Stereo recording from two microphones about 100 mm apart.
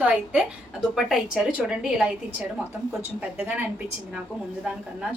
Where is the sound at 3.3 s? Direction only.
15° right (ahead or behind).